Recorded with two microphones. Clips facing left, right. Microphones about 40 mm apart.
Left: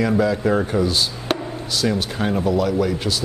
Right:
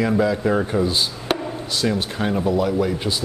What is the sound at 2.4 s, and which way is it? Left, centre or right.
Speech, right.